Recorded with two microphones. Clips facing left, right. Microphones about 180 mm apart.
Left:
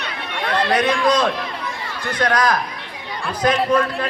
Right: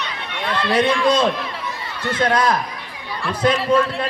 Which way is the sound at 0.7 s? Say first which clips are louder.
Right 2 dB; 30° right (ahead or behind).